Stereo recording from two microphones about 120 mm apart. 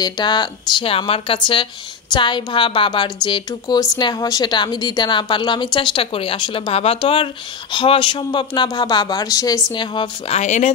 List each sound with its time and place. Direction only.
0.0 s speech: 40° left (ahead or behind)
9.8 s speech: 40° left (ahead or behind)
10.3 s speech: 80° left